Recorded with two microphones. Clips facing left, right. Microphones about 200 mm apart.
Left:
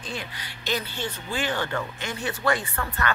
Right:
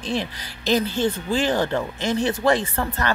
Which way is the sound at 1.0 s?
40° right (ahead or behind).